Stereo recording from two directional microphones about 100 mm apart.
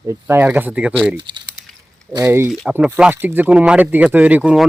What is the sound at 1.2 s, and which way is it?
Speech, 55° right (ahead or behind).